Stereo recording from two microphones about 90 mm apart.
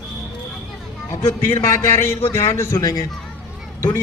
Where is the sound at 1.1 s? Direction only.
30° left (ahead or behind).